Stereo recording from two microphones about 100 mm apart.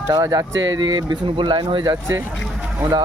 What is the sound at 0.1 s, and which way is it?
Speech, 35° right (ahead or behind).